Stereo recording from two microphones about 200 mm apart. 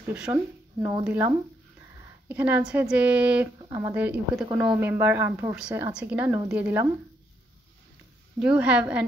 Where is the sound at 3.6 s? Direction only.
20° right (ahead or behind).